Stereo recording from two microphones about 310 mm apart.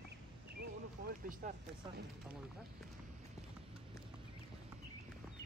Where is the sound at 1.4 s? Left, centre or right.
Right.